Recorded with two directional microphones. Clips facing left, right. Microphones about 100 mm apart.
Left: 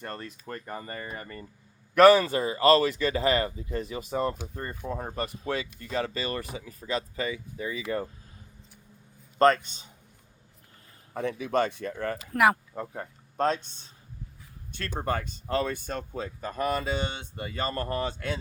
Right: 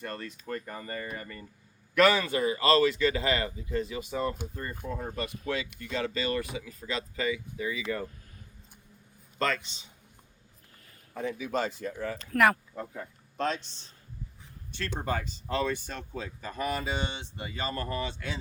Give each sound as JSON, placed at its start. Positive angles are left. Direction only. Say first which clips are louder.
{"t": 0.0, "sound": "speech", "louder": "even", "side_deg": 35}
{"t": 9.4, "sound": "speech", "louder": "left 9 dB", "side_deg": 45}
{"t": 11.1, "sound": "speech", "louder": "left 4 dB", "side_deg": 65}
{"t": 12.3, "sound": "speech", "louder": "left 1 dB", "side_deg": 20}
{"t": 13.0, "sound": "speech", "louder": "left 5 dB", "side_deg": 45}
{"t": 14.7, "sound": "speech", "louder": "left 2 dB", "side_deg": 50}